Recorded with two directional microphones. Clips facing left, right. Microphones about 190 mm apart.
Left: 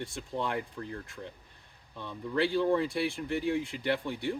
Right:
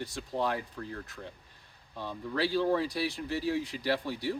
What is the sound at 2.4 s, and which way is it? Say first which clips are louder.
Speech: left 1 dB; 25° left (ahead or behind).